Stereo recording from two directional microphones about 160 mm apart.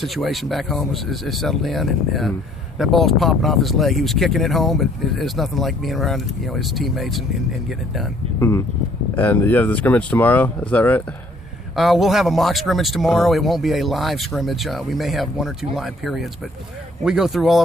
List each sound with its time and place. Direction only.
0.0 s speech: centre (ahead or behind)
8.4 s speech: 15° left (ahead or behind)
11.8 s speech: centre (ahead or behind)